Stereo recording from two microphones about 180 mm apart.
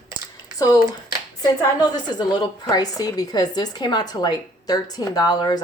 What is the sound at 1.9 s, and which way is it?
Speech, 25° left (ahead or behind).